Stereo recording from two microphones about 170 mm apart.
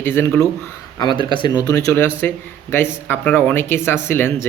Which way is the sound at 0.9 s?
25° left (ahead or behind).